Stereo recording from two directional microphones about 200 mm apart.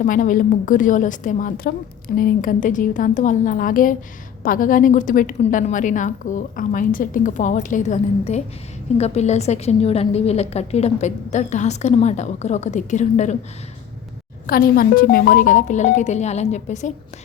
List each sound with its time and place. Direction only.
0.0 s a woman's voice: 40° left (ahead or behind)
14.4 s a woman's voice: 45° left (ahead or behind)